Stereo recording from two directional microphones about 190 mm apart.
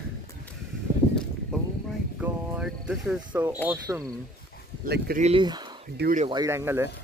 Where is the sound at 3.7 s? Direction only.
15° right (ahead or behind).